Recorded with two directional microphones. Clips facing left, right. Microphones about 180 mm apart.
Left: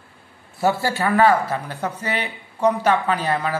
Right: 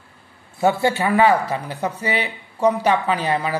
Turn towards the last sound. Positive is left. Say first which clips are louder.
# right 1 dB
turn(degrees=-10)  # may be behind; listen again after turning